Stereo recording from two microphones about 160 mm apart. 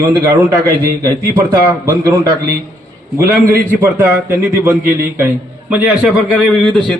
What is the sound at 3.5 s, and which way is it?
A man's voice, 10° right (ahead or behind).